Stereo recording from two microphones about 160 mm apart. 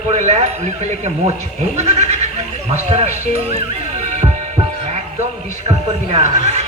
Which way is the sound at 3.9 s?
45° right (ahead or behind).